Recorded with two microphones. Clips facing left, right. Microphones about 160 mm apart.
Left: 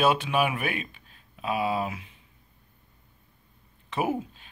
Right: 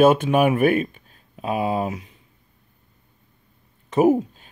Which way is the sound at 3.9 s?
40° right (ahead or behind).